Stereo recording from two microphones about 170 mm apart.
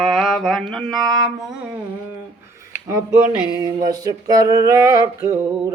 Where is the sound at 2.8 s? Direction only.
15° right (ahead or behind).